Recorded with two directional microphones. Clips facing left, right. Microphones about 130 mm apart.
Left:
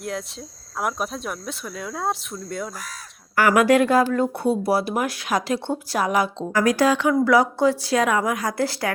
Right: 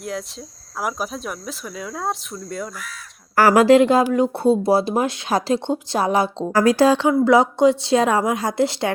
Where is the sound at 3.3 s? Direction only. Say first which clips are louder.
Right 4 dB; 35° right (ahead or behind).